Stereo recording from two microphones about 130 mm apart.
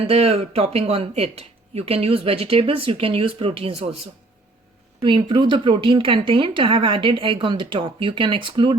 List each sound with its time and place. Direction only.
0.1 s speech: 50° right (ahead or behind)
4.9 s speech: 40° right (ahead or behind)